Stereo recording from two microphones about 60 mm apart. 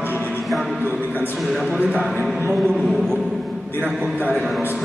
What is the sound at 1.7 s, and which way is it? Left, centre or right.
Speech, centre.